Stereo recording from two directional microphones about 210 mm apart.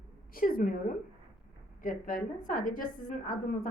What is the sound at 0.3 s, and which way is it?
A woman's voice, 40° left (ahead or behind).